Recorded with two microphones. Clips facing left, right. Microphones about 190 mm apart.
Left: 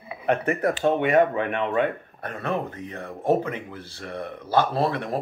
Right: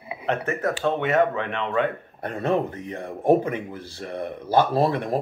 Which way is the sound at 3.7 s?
55° left (ahead or behind).